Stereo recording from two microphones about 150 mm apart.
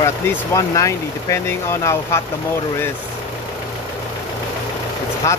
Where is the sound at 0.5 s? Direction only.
20° left (ahead or behind).